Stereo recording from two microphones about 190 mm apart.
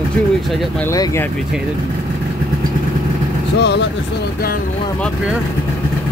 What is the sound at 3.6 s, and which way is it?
Speech, 60° left (ahead or behind).